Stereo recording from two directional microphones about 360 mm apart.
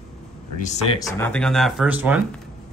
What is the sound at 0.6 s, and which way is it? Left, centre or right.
Speech, centre.